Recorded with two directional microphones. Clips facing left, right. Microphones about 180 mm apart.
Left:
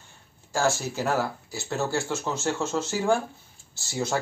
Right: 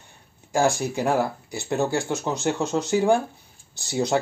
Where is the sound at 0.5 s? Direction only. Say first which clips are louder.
Right 4 dB; 15° right (ahead or behind).